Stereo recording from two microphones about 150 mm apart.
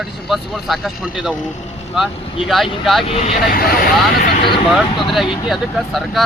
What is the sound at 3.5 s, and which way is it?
Speech, 85° left.